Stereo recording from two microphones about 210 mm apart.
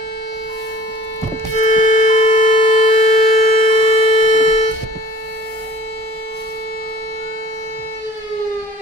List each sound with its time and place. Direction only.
1.6 s music: 35° left (ahead or behind)
2.6 s siren: 30° left (ahead or behind)